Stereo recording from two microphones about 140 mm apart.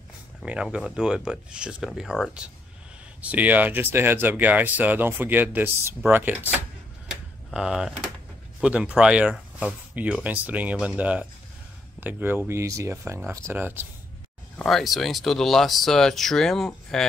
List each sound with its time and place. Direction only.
0.4 s speech: 5° right (ahead or behind)
7.1 s a sound: 5° right (ahead or behind)
8.5 s speech: 10° right (ahead or behind)
14.6 s speech: centre (ahead or behind)